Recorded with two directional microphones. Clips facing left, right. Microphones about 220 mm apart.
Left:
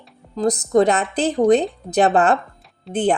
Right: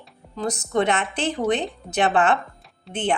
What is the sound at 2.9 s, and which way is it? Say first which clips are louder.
Speech: left 8 dB; centre (ahead or behind).